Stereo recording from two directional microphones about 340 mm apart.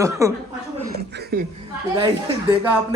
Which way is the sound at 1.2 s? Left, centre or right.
Right.